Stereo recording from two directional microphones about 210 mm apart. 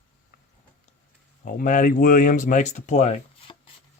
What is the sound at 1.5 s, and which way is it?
Speech, 40° left (ahead or behind).